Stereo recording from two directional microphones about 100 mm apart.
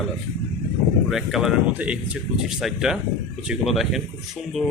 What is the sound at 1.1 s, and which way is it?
A man's voice, 5° right (ahead or behind).